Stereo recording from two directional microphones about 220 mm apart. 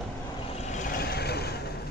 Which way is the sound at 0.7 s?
45° left (ahead or behind).